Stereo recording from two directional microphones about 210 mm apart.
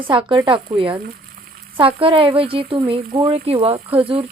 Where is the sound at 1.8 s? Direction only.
25° right (ahead or behind).